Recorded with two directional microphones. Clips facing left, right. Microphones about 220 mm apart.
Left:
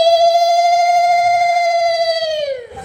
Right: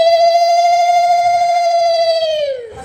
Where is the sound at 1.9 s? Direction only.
25° right (ahead or behind).